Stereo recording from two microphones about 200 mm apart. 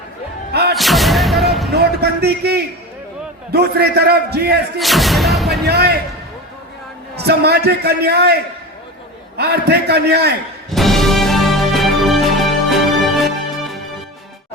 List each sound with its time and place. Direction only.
0.5 s music: 55° right (ahead or behind)
0.8 s music: centre (ahead or behind)
1.7 s a sound: 55° right (ahead or behind)
3.5 s a man's voice: 55° right (ahead or behind)
4.8 s speech: centre (ahead or behind)
5.6 s speech: 55° right (ahead or behind)
7.2 s a man's voice: 55° right (ahead or behind)
9.4 s a man's voice: 55° right (ahead or behind)
10.7 s music: centre (ahead or behind)